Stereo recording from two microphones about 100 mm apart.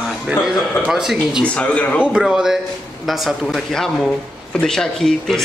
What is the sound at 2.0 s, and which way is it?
Speech, 10° right (ahead or behind).